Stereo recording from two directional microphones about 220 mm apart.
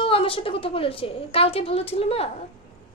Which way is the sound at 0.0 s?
25° left (ahead or behind).